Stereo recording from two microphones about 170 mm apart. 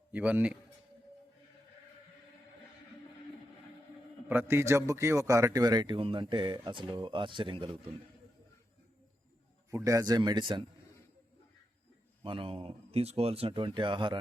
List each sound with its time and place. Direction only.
0.1 s a man's voice: 10° right (ahead or behind)
4.3 s a man's voice: 15° right (ahead or behind); by 7.9 s 30° right (ahead or behind)
9.6 s a man's voice: 20° right (ahead or behind)
12.2 s speech: 30° right (ahead or behind)